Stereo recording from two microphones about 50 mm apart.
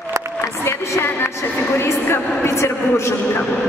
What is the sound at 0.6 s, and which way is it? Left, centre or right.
Music, left.